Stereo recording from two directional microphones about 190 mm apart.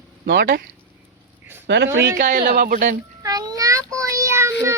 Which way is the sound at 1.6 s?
70° right (ahead or behind).